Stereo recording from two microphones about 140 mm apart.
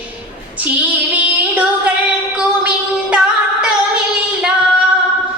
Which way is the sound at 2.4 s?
5° right (ahead or behind).